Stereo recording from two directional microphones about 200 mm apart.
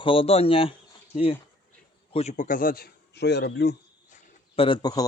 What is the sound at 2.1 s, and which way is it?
A man's voice, 35° left (ahead or behind).